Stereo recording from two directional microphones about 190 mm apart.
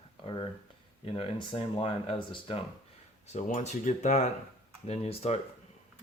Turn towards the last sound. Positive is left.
turn(degrees=30)  # may be behind; listen again after turning